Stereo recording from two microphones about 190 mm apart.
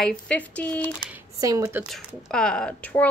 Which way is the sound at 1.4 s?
15° right (ahead or behind).